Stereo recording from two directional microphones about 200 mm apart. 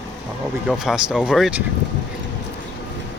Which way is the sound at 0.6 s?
Centre (ahead or behind).